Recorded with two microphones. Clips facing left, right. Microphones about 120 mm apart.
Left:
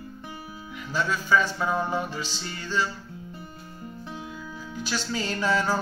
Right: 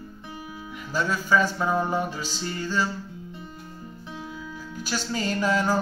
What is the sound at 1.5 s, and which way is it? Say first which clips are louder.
Music: right 2 dB; 10° right (ahead or behind).